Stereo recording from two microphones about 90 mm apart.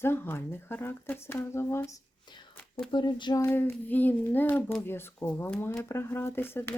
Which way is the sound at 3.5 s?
20° left (ahead or behind).